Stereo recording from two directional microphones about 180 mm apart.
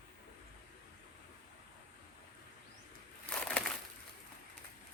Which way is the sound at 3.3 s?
5° left (ahead or behind).